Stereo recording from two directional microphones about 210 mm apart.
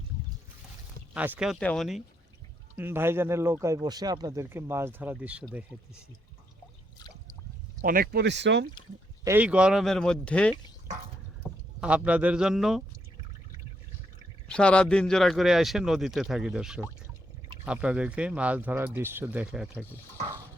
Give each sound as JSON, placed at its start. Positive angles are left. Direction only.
{"t": 1.1, "sound": "speech", "side_deg": -5}
{"t": 2.7, "sound": "speech", "side_deg": -10}
{"t": 7.8, "sound": "speech", "side_deg": -45}
{"t": 9.2, "sound": "speech", "side_deg": -10}
{"t": 11.4, "sound": "rowboat", "side_deg": 10}
{"t": 11.8, "sound": "speech", "side_deg": -5}
{"t": 14.4, "sound": "speech", "side_deg": 5}